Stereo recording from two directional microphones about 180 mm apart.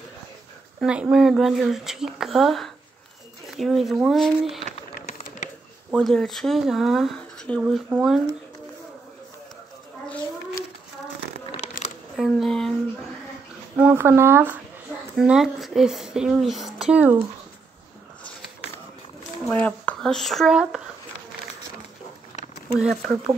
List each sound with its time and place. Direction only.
0.7 s speech: 5° right (ahead or behind)
5.9 s speech: centre (ahead or behind)
11.8 s a sound: 50° left (ahead or behind)
12.2 s speech: centre (ahead or behind)
13.7 s speech: 10° right (ahead or behind)
19.4 s speech: 10° left (ahead or behind)
22.8 s speech: centre (ahead or behind)